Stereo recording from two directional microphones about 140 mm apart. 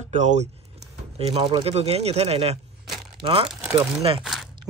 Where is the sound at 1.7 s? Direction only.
45° right (ahead or behind).